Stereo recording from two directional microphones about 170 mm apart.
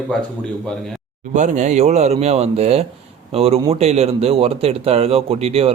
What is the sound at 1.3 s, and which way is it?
Speech, 45° right (ahead or behind).